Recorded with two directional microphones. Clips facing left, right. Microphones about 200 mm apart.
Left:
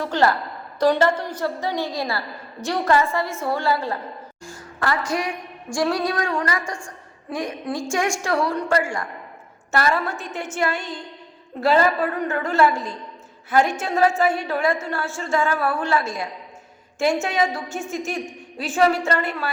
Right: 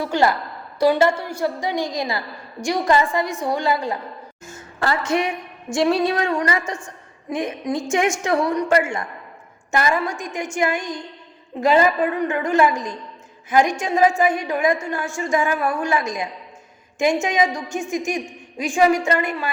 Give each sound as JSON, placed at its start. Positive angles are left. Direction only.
{"t": 0.0, "sound": "a woman's voice", "side_deg": -10}